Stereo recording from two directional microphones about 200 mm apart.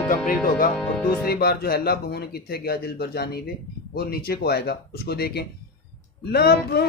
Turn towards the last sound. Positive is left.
turn(degrees=50)  # may be behind; listen again after turning